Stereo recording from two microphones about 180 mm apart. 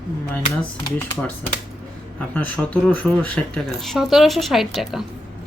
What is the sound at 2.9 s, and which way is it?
Speech, 5° left (ahead or behind).